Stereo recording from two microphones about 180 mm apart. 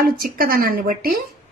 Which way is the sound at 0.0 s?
55° right (ahead or behind).